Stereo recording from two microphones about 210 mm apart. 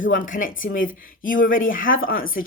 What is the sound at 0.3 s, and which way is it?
Speech, 40° left (ahead or behind).